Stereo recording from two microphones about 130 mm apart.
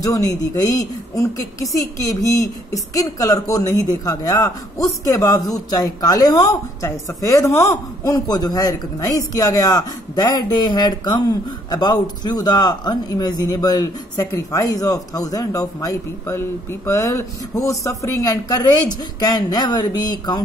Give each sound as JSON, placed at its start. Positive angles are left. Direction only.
{"t": 0.0, "sound": "a woman's voice", "side_deg": 30}